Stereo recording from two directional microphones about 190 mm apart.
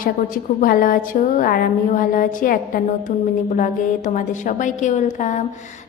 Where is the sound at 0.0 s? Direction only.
45° left (ahead or behind).